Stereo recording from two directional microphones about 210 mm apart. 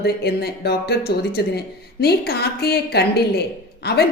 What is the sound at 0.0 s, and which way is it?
Speech, 50° left (ahead or behind).